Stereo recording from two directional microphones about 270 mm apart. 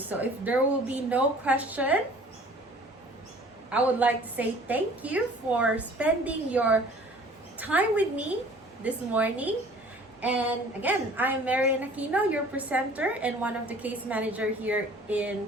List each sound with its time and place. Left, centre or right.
0.1 s a woman's voice: centre
3.7 s a woman's voice: centre